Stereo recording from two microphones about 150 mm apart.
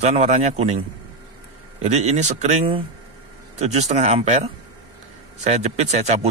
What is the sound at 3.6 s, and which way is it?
A man's voice, 45° right (ahead or behind).